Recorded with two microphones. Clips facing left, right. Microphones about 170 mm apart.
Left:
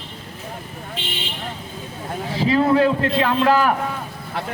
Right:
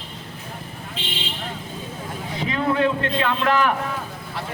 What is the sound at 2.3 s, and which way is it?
A man's voice, 35° left (ahead or behind).